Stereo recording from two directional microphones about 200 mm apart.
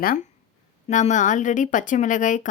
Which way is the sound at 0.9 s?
40° left (ahead or behind).